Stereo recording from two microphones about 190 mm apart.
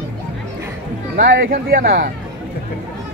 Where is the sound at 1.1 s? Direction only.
50° right (ahead or behind).